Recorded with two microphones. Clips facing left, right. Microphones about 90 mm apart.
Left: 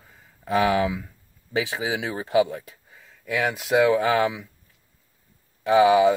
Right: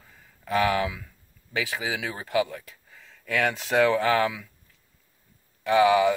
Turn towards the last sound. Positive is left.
turn(degrees=20)  # may be behind; listen again after turning